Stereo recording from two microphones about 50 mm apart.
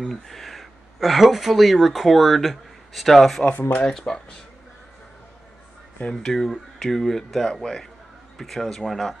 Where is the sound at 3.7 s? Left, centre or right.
Left.